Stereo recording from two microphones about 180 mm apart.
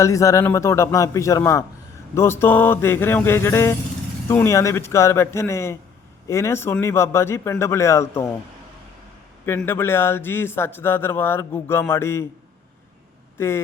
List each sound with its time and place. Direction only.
0.0 s speech: 15° left (ahead or behind)
9.5 s speech: 10° left (ahead or behind)
13.4 s speech: 15° left (ahead or behind)